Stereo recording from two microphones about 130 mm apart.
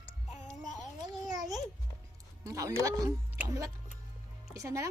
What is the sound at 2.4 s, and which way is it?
Speech, 25° right (ahead or behind).